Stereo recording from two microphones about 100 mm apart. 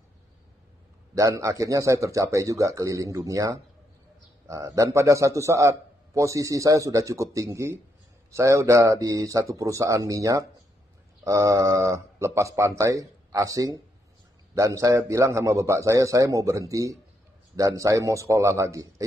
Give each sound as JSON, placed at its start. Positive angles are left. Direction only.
{"t": 1.1, "sound": "a man's voice", "side_deg": -30}